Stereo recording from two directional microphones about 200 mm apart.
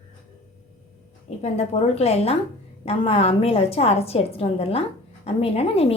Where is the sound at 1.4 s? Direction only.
35° left (ahead or behind).